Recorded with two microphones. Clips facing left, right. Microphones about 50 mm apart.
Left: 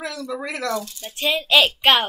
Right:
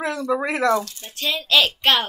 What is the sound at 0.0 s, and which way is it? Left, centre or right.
Speech, right.